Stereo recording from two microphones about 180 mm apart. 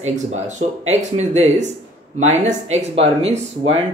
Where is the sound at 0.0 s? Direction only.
40° right (ahead or behind).